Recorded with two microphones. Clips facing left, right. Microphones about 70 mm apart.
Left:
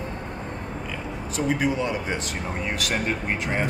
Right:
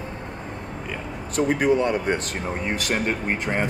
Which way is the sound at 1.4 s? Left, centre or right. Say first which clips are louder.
Right 4 dB; centre.